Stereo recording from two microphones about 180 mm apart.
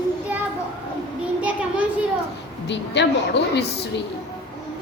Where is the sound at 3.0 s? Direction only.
70° left (ahead or behind).